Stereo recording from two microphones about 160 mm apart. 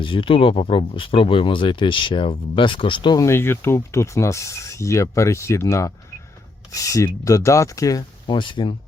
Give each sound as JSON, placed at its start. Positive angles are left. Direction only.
{"t": 0.0, "sound": "speech", "side_deg": 30}